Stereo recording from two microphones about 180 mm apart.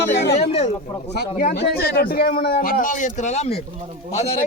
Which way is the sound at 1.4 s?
55° left (ahead or behind).